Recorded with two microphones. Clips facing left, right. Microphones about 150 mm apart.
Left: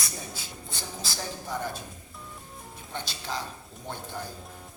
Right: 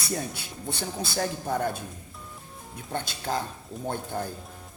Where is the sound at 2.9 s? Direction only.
50° right (ahead or behind).